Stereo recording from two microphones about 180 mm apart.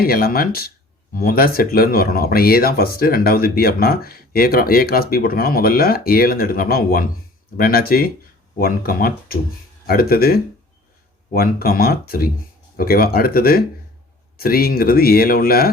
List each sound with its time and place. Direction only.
0.0 s speech: 55° left (ahead or behind)